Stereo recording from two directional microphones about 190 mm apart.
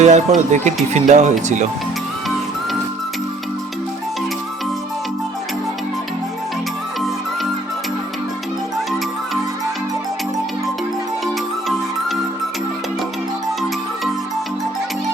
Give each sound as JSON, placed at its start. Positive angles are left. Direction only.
{"t": 0.0, "sound": "speech", "side_deg": -40}